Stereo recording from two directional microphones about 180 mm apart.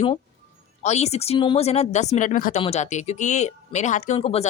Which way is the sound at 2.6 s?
35° left (ahead or behind).